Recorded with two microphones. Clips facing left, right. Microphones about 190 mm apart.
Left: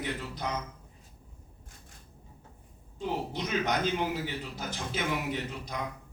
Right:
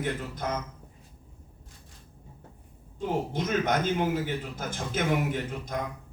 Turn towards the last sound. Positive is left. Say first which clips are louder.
# right 3 dB
turn(degrees=-50)  # may be behind; listen again after turning